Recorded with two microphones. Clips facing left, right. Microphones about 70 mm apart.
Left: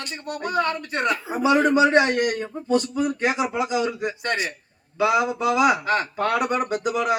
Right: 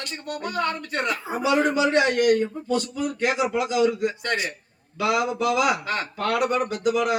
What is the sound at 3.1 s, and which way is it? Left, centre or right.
Speech, left.